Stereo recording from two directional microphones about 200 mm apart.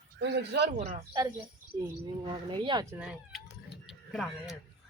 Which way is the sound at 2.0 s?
25° right (ahead or behind).